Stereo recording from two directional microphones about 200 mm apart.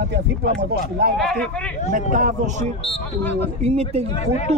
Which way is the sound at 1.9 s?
45° right (ahead or behind).